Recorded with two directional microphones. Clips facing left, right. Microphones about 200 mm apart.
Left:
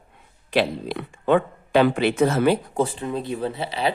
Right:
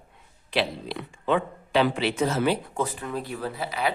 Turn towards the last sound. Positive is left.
turn(degrees=30)  # may be behind; listen again after turning